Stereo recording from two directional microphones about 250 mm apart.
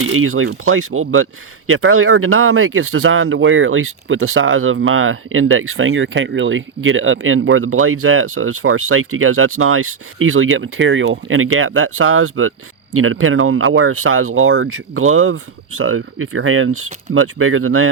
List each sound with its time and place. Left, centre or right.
0.1 s speech: right